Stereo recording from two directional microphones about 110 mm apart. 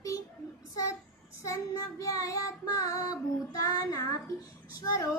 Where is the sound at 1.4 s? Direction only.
30° left (ahead or behind).